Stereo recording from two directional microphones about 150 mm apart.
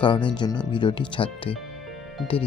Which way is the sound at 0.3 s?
30° left (ahead or behind).